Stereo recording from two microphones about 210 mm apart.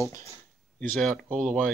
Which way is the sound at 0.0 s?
15° left (ahead or behind).